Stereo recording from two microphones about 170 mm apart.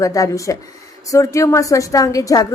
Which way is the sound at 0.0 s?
20° left (ahead or behind).